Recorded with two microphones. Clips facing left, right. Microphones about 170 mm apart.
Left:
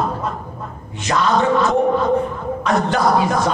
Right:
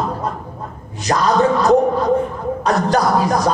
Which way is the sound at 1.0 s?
40° right (ahead or behind).